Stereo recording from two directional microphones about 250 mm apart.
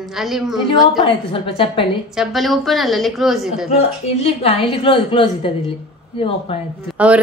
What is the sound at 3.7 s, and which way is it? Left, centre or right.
A woman's voice, left.